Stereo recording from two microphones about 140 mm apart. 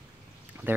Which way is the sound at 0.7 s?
15° right (ahead or behind).